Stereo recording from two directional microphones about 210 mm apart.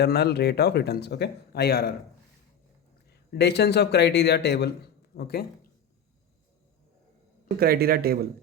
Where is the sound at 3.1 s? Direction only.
55° left (ahead or behind).